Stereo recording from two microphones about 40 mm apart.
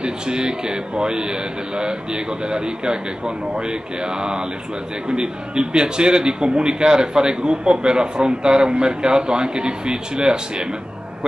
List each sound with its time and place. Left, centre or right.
0.0 s a man's voice: right